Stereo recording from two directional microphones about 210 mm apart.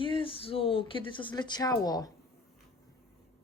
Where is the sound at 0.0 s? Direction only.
25° left (ahead or behind).